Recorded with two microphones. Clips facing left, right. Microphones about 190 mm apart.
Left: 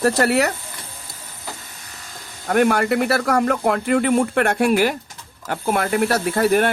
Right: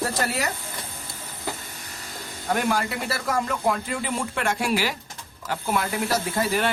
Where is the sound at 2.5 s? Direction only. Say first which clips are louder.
Left 9 dB; 60° left (ahead or behind).